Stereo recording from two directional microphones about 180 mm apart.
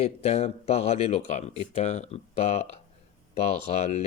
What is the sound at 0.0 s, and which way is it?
Speech, 35° left (ahead or behind).